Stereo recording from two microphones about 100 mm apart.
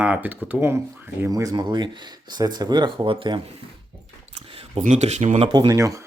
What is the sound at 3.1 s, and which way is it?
Speech, 55° right (ahead or behind).